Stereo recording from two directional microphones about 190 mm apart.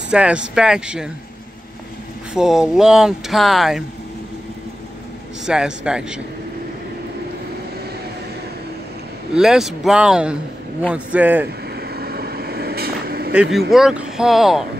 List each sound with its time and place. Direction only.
0.1 s speech: 5° right (ahead or behind)
2.3 s speech: 5° right (ahead or behind)
5.4 s speech: 5° right (ahead or behind)
9.3 s speech: 5° right (ahead or behind)
11.7 s vehicle: 55° right (ahead or behind)
13.3 s speech: 5° right (ahead or behind)